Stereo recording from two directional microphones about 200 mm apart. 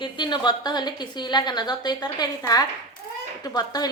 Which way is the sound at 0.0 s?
20° left (ahead or behind).